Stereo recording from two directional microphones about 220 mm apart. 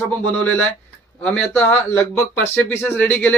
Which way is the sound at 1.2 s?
5° left (ahead or behind).